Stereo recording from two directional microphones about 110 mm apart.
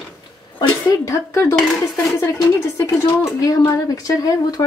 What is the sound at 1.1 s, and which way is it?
Speech, 25° left (ahead or behind).